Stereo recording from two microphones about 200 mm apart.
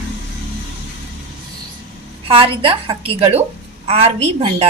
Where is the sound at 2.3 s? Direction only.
25° right (ahead or behind).